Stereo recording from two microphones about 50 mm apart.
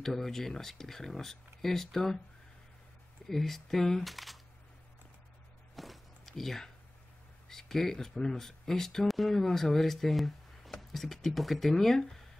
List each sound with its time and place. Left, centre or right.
0.0 s speech: centre
3.3 s speech: centre
5.8 s walk: centre
7.4 s speech: centre